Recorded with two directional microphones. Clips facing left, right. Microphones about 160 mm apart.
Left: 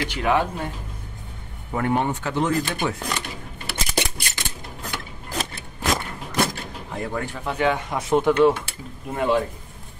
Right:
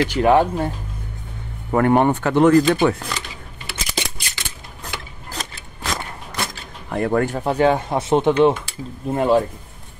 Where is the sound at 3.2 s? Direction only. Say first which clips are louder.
Left 2 dB; 60° left (ahead or behind).